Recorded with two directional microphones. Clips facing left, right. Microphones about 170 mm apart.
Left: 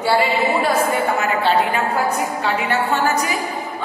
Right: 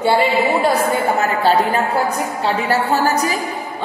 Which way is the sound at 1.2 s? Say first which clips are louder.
Right 2 dB; 40° right (ahead or behind).